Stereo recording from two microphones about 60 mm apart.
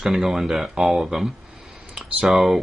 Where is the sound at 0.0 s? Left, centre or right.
Centre.